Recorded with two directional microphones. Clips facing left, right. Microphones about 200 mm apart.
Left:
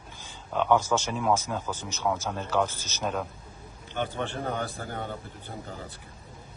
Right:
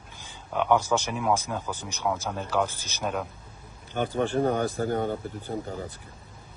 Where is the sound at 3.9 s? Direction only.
40° right (ahead or behind).